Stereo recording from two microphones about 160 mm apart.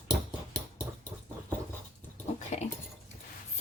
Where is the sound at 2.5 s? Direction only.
45° left (ahead or behind).